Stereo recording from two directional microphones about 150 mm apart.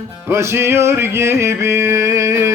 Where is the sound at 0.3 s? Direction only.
15° right (ahead or behind).